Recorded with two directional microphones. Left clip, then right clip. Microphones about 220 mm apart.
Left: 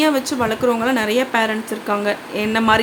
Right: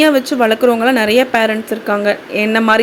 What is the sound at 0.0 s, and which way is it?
Speech, 15° right (ahead or behind).